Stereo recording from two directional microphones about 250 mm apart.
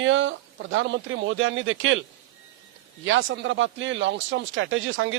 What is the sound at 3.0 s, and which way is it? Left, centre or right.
Speech, right.